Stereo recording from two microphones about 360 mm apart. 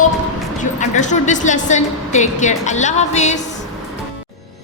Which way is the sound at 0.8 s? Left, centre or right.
Centre.